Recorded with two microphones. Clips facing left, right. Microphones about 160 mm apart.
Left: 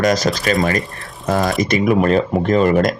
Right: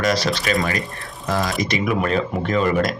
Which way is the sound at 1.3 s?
55° left (ahead or behind).